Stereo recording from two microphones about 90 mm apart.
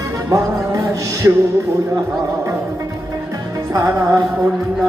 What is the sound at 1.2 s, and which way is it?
Music, 30° right (ahead or behind).